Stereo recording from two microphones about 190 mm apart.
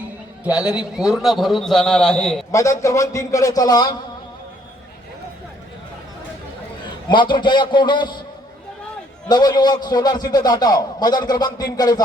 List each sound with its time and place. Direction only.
0.4 s a man's voice: 5° right (ahead or behind)
2.5 s a man's voice: 15° left (ahead or behind)
7.1 s a man's voice: 25° left (ahead or behind)
9.3 s a man's voice: 20° left (ahead or behind)